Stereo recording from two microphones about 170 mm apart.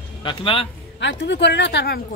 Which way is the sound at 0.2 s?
30° left (ahead or behind).